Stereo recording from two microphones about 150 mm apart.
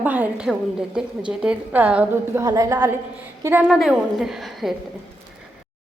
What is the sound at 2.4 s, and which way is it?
A woman's voice, 20° right (ahead or behind).